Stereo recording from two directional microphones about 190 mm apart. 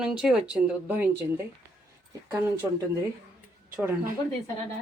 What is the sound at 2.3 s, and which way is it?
Speech, 15° right (ahead or behind).